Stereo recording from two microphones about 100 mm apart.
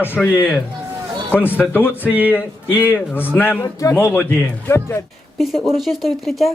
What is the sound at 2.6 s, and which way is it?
Speech, 15° right (ahead or behind).